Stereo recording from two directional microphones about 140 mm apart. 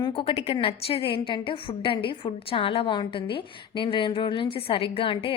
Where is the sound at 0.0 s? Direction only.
40° left (ahead or behind).